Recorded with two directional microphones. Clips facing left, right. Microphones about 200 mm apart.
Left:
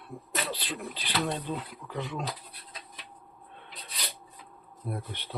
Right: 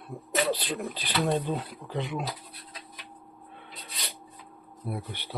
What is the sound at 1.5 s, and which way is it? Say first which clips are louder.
Speech: right 3 dB; 30° right (ahead or behind).